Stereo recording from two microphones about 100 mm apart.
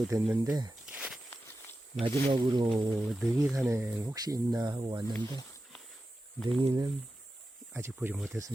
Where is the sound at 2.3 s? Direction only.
60° right (ahead or behind).